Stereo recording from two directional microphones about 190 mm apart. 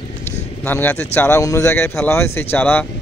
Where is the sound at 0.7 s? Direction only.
10° left (ahead or behind).